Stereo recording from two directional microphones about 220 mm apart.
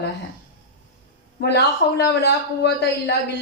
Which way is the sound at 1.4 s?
50° left (ahead or behind).